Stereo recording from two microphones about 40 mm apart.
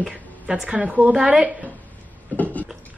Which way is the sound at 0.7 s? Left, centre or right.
Right.